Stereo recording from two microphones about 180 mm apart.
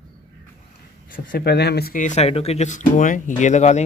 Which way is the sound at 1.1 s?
55° left (ahead or behind).